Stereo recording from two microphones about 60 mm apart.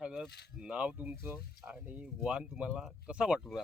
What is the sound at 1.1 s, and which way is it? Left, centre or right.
Speech, right.